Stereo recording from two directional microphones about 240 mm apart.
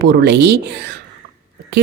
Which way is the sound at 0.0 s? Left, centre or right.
Right.